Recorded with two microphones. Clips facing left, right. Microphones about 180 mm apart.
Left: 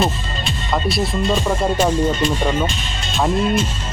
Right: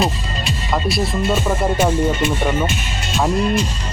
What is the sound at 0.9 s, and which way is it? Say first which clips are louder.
Speech: even; centre (ahead or behind).